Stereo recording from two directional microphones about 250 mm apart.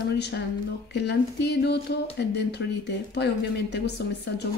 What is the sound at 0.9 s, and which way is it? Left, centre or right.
Speech, left.